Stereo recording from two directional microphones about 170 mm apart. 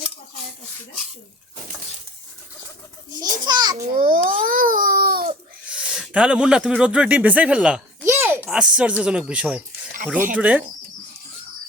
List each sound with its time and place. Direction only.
3.1 s a child's voice: 25° right (ahead or behind)
3.9 s babbling: 55° right (ahead or behind)
5.6 s a man's voice: 5° right (ahead or behind)